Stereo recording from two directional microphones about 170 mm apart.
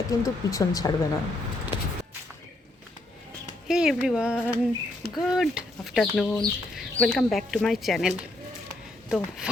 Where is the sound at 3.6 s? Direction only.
5° right (ahead or behind).